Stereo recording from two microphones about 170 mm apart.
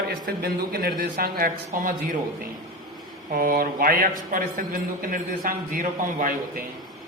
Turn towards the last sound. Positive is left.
turn(degrees=-55)  # may be behind; listen again after turning